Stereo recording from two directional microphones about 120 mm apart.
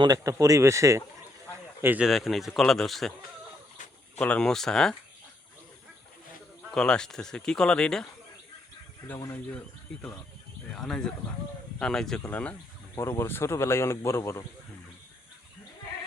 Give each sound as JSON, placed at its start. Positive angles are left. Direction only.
{"t": 0.0, "sound": "speech", "side_deg": -30}
{"t": 2.0, "sound": "speech", "side_deg": 0}
{"t": 4.2, "sound": "speech", "side_deg": 10}
{"t": 6.7, "sound": "speech", "side_deg": 5}
{"t": 9.0, "sound": "speech", "side_deg": 20}
{"t": 10.8, "sound": "speech", "side_deg": 5}
{"t": 13.0, "sound": "speech", "side_deg": 20}